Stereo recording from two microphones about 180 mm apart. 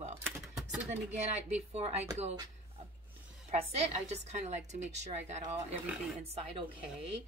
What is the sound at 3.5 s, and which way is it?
A woman's voice, 35° right (ahead or behind).